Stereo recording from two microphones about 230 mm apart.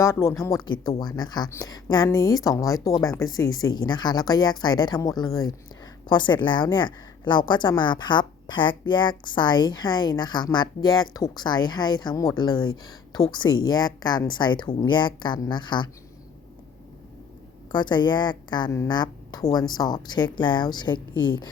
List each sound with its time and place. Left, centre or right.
0.0 s a woman's voice: centre
17.7 s a woman's voice: centre